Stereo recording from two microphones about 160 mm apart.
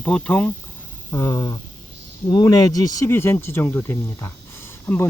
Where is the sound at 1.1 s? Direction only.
20° left (ahead or behind).